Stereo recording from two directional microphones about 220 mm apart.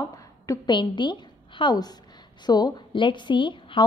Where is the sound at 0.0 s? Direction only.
15° left (ahead or behind).